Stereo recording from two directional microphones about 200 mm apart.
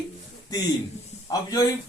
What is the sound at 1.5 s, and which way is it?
Speech, 20° left (ahead or behind).